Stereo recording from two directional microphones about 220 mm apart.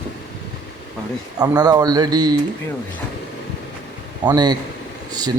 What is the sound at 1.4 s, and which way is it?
Speech, 15° right (ahead or behind).